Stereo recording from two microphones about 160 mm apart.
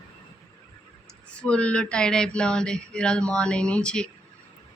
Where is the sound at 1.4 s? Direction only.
5° left (ahead or behind).